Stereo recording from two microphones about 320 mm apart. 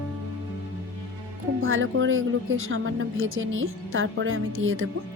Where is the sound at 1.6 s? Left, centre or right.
Right.